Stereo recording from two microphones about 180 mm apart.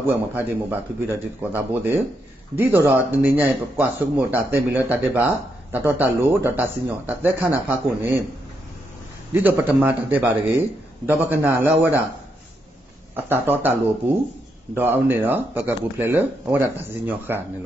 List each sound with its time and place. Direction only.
0.0 s speech: 10° right (ahead or behind)
9.3 s speech: 10° right (ahead or behind)
13.1 s speech: 10° right (ahead or behind)